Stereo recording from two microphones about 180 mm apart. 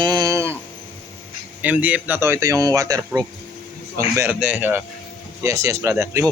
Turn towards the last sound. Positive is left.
turn(degrees=-15)  # may be behind; listen again after turning